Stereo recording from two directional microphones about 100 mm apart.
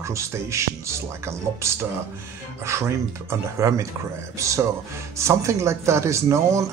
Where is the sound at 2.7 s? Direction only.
25° right (ahead or behind).